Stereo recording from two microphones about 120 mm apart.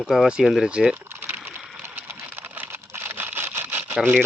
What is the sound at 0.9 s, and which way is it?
Typing, 20° right (ahead or behind).